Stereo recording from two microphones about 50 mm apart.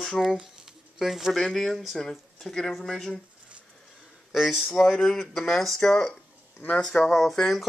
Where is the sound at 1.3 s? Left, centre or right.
Centre.